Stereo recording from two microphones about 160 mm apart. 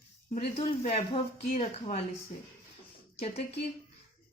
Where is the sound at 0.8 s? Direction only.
40° left (ahead or behind).